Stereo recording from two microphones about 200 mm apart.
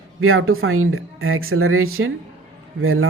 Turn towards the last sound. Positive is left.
turn(degrees=-90)